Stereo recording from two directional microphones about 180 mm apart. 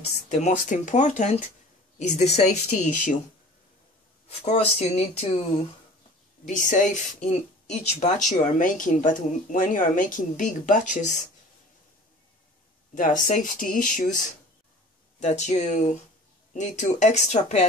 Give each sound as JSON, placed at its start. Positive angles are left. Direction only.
{"t": 0.3, "sound": "speech", "side_deg": 40}
{"t": 4.3, "sound": "speech", "side_deg": 35}
{"t": 6.4, "sound": "speech", "side_deg": 45}
{"t": 12.9, "sound": "speech", "side_deg": 45}
{"t": 15.1, "sound": "speech", "side_deg": 40}